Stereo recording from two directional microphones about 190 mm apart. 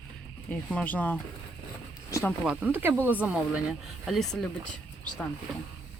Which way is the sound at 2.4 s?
5° right (ahead or behind).